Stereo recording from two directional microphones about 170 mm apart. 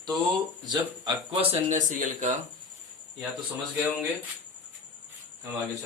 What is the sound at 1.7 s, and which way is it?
Speech, 50° right (ahead or behind).